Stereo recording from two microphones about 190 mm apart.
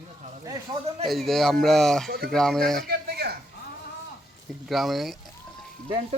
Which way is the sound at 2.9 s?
55° right (ahead or behind).